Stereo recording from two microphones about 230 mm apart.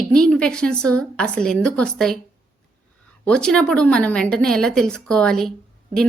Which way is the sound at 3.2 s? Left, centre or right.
Centre.